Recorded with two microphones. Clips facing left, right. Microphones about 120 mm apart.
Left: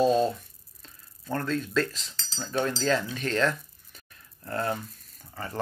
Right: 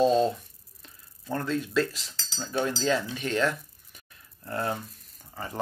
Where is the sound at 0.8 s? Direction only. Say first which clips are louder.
Even; 15° right (ahead or behind).